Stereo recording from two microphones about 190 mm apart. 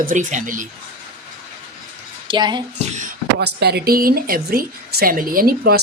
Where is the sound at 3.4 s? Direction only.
60° right (ahead or behind).